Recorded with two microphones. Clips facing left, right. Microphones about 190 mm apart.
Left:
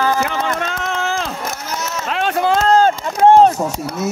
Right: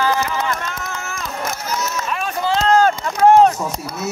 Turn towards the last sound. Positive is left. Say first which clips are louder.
# left 2 dB
turn(degrees=30)  # may be behind; listen again after turning